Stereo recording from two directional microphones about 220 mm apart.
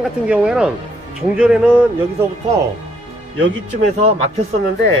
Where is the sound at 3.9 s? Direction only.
30° right (ahead or behind).